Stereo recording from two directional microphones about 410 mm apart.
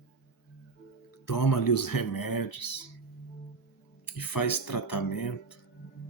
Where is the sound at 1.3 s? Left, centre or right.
Left.